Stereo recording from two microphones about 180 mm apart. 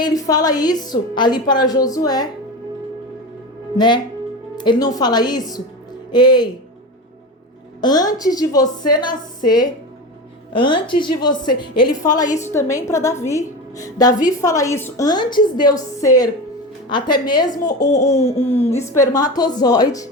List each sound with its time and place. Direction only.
0.0 s a woman's voice: 20° left (ahead or behind)
3.8 s a woman's voice: 25° left (ahead or behind)
7.8 s a woman's voice: 20° left (ahead or behind)
10.5 s a woman's voice: 25° left (ahead or behind)
18.2 s speech: 35° left (ahead or behind)
18.4 s a woman's voice: 15° left (ahead or behind)